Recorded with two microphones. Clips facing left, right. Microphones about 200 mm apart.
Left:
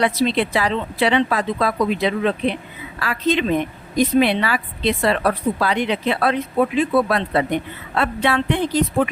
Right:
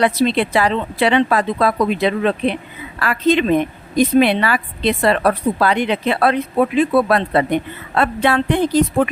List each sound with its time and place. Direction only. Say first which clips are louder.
0.0 s a woman's voice: right 3 dB; 55° right (ahead or behind)